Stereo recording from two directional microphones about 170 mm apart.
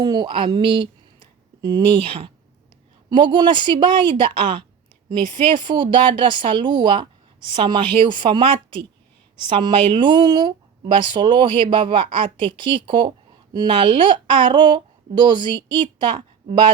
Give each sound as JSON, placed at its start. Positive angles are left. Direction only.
{"t": 0.0, "sound": "speech", "side_deg": -25}